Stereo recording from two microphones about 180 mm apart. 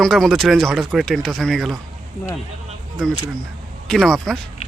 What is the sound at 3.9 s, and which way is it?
Speech, centre (ahead or behind).